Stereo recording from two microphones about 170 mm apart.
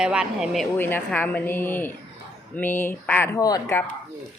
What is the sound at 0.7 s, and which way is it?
Speech, 10° left (ahead or behind).